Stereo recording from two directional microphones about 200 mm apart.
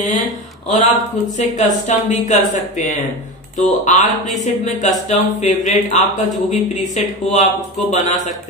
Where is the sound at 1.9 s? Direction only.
35° left (ahead or behind).